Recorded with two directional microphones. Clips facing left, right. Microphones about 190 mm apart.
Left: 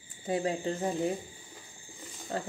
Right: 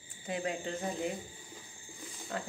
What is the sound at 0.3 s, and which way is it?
Speech, 35° left (ahead or behind).